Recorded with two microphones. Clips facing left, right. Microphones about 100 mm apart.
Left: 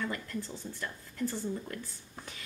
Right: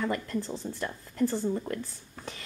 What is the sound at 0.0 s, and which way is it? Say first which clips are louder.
Speech: right 6 dB; 35° right (ahead or behind).